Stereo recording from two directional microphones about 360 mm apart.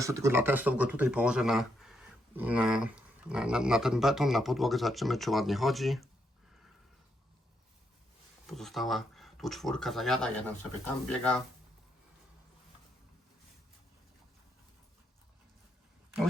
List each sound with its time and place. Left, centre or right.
0.0 s speech: centre
8.4 s speech: centre